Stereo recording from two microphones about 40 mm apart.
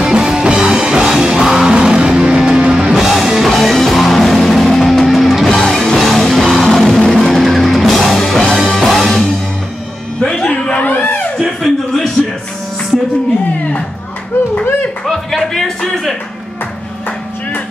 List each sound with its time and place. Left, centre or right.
0.1 s music: centre
3.0 s music: centre
10.2 s music: centre
10.8 s a sound: left
11.6 s a sound: centre
15.0 s music: centre